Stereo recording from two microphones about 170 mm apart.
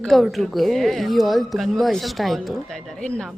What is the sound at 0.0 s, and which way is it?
Speech, centre (ahead or behind).